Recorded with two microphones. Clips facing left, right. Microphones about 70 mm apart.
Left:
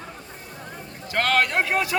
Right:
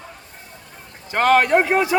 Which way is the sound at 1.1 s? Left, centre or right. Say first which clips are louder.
Right 7 dB; right.